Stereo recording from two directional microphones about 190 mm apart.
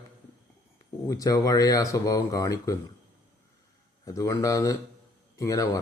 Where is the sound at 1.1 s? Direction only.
20° left (ahead or behind).